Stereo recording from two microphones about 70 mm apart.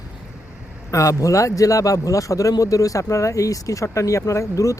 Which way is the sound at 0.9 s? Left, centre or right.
Left.